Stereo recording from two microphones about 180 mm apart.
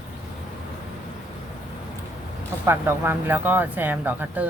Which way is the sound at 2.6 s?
10° right (ahead or behind).